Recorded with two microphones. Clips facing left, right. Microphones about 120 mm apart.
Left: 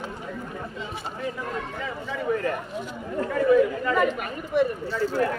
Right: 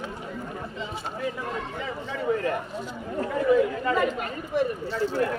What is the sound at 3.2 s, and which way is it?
Speech, 20° right (ahead or behind).